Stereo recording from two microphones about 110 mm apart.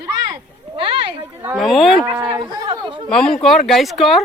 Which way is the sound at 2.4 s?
45° right (ahead or behind).